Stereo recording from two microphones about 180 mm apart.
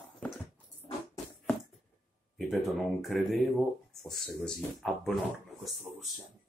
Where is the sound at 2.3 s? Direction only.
Centre (ahead or behind).